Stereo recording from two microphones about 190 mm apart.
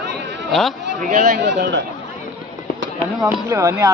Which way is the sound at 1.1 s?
40° right (ahead or behind).